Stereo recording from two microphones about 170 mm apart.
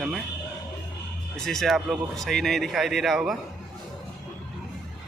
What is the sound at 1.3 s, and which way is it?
A man's voice, centre (ahead or behind).